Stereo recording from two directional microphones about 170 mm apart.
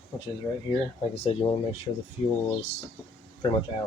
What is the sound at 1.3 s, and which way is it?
Speech, 35° left (ahead or behind).